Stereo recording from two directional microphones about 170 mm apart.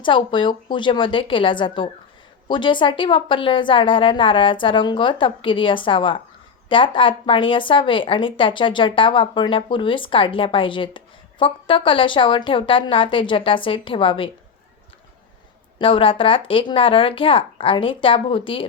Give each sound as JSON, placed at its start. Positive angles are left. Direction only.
{"t": 0.0, "sound": "a woman's voice", "side_deg": 30}
{"t": 15.8, "sound": "speech", "side_deg": 30}